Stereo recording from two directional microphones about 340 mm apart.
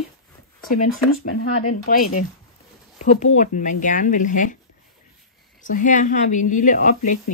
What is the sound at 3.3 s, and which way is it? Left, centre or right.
Speech, left.